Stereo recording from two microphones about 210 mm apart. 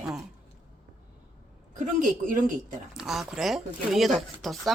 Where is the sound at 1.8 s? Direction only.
40° right (ahead or behind).